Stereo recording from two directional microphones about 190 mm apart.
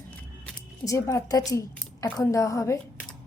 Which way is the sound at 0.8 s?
15° left (ahead or behind).